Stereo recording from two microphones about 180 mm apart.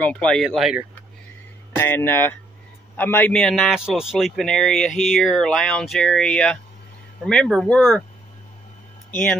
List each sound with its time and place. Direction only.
0.0 s a man's voice: 5° left (ahead or behind)
1.8 s a man's voice: 10° left (ahead or behind)
9.1 s a man's voice: 5° left (ahead or behind)